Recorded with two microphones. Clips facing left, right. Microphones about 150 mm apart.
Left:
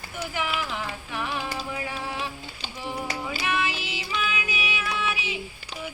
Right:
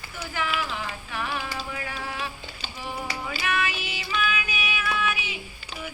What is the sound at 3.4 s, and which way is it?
Music, 25° left (ahead or behind).